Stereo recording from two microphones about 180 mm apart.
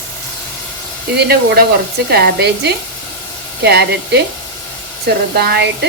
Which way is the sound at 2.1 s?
65° right (ahead or behind).